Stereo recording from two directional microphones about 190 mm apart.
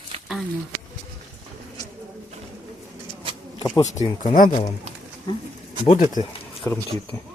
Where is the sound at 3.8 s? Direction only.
35° left (ahead or behind).